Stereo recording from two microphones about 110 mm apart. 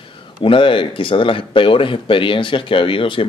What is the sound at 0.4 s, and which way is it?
Speech, 50° left (ahead or behind).